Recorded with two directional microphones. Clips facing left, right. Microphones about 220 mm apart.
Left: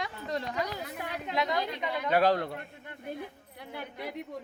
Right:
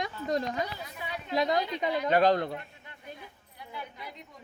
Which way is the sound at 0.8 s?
60° left (ahead or behind).